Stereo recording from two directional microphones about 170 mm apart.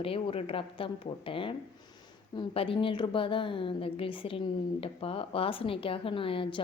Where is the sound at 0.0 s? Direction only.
35° left (ahead or behind).